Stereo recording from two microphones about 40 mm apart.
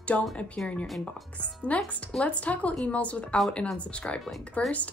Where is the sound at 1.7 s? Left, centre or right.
Left.